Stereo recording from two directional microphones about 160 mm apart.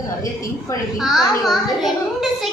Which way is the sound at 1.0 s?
Centre (ahead or behind).